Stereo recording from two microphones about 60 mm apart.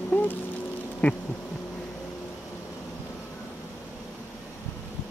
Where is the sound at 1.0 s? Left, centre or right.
Left.